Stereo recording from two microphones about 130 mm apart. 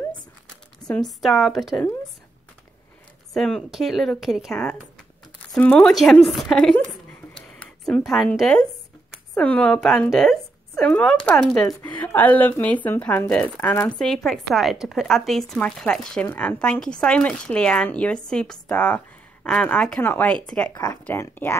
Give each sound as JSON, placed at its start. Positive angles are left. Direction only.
{"t": 0.8, "sound": "speech", "side_deg": 5}
{"t": 3.3, "sound": "speech", "side_deg": 5}
{"t": 13.9, "sound": "speech", "side_deg": 0}